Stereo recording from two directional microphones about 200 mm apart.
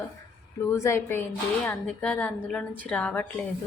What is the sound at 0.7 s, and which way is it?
A woman's voice, 15° left (ahead or behind).